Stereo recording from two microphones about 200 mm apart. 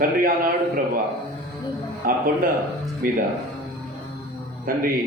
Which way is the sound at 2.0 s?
45° right (ahead or behind).